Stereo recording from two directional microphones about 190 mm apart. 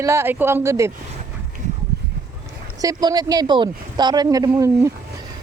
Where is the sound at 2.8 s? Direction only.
20° right (ahead or behind).